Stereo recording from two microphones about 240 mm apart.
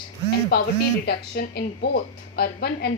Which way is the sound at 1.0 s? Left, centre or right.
Left.